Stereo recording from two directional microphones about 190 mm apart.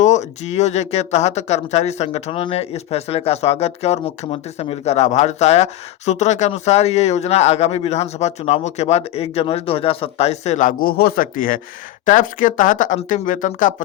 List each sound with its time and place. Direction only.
0.0 s speech: 40° left (ahead or behind)